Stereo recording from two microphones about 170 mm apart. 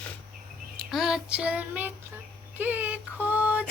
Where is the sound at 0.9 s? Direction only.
Centre (ahead or behind).